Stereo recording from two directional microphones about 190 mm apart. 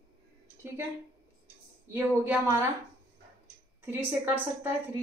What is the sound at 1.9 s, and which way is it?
Speech, 10° right (ahead or behind).